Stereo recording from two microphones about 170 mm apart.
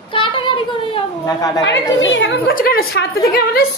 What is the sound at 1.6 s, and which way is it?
Speech, 90° left.